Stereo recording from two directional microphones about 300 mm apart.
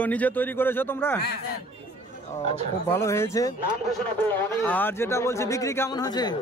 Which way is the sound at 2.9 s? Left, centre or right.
Centre.